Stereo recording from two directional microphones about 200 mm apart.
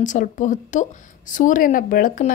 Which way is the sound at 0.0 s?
40° left (ahead or behind).